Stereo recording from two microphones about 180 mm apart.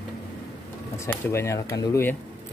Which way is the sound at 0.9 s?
15° left (ahead or behind).